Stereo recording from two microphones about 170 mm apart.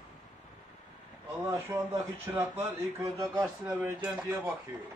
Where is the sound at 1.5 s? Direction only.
15° right (ahead or behind).